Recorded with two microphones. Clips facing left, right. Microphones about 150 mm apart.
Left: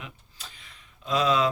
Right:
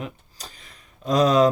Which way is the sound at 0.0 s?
40° right (ahead or behind).